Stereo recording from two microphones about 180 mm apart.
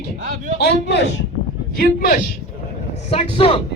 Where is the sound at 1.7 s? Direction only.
55° left (ahead or behind).